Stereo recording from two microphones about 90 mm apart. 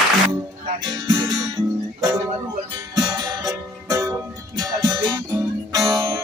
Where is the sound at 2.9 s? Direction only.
45° right (ahead or behind).